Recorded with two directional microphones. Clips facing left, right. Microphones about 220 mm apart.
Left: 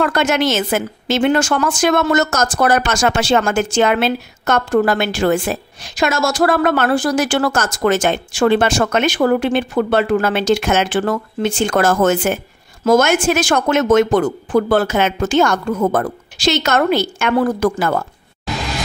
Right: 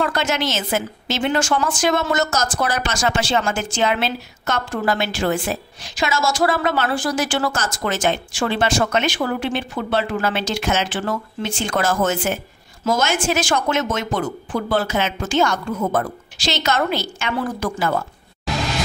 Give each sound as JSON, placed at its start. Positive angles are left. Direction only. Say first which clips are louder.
{"t": 0.0, "sound": "a woman's voice", "louder": "left 5 dB", "side_deg": 60}